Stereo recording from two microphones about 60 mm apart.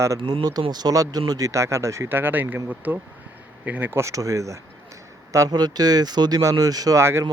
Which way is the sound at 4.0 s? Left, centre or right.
Right.